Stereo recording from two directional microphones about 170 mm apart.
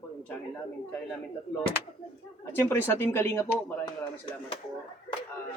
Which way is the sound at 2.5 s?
15° left (ahead or behind).